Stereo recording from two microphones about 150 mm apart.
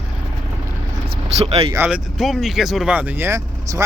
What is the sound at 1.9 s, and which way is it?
Speech, centre (ahead or behind).